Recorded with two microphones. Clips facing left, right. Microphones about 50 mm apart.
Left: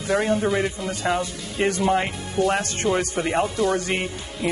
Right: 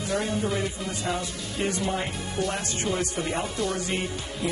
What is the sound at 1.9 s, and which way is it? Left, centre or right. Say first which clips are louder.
Speech: left 7 dB; left.